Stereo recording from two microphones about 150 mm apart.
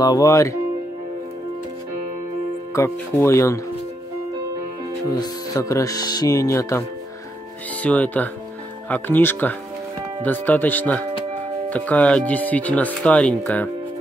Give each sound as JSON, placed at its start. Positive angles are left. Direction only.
{"t": 0.0, "sound": "speech", "side_deg": 25}
{"t": 2.7, "sound": "speech", "side_deg": 20}
{"t": 5.1, "sound": "speech", "side_deg": 25}
{"t": 7.8, "sound": "speech", "side_deg": 10}